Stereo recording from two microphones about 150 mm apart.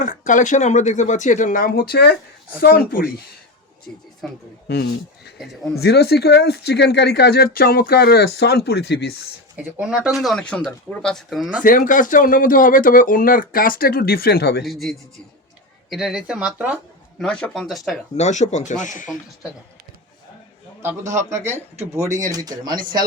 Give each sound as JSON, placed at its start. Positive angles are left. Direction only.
{"t": 0.0, "sound": "speech", "side_deg": 55}
{"t": 2.6, "sound": "speech", "side_deg": 75}
{"t": 3.9, "sound": "speech", "side_deg": 10}
{"t": 5.4, "sound": "speech", "side_deg": 0}
{"t": 5.8, "sound": "speech", "side_deg": 90}
{"t": 9.6, "sound": "speech", "side_deg": -5}
{"t": 11.6, "sound": "speech", "side_deg": 60}
{"t": 14.6, "sound": "speech", "side_deg": 0}
{"t": 17.2, "sound": "speech", "side_deg": 5}
{"t": 18.2, "sound": "speech", "side_deg": 50}
{"t": 20.8, "sound": "a man's voice", "side_deg": -20}